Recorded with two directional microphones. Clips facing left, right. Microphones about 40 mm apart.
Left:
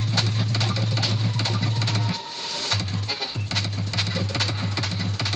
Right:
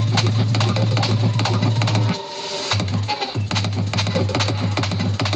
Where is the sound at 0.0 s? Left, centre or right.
Right.